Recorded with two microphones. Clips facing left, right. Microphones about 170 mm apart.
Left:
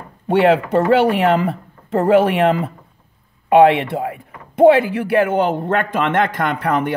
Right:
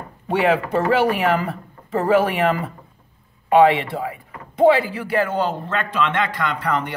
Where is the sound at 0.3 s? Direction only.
65° left (ahead or behind).